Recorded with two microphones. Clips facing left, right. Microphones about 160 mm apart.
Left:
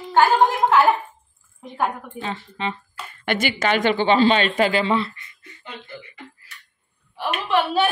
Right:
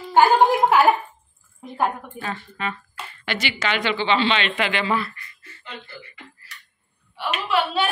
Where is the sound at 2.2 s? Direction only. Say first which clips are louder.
Left 2 dB; 25° left (ahead or behind).